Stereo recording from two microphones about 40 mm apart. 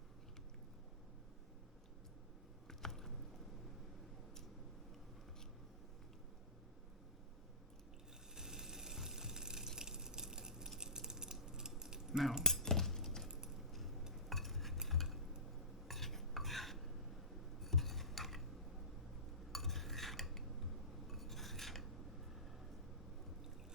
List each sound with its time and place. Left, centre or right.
2.6 s a sound: centre
8.4 s a sound: centre
10.8 s typing: centre
11.8 s keys jangling: centre
12.6 s cutlery: centre
13.7 s a sound: centre
14.1 s stir: centre
15.9 s cutlery: centre
19.5 s cutlery: centre